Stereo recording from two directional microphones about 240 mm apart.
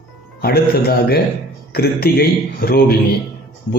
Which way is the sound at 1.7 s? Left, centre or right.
Left.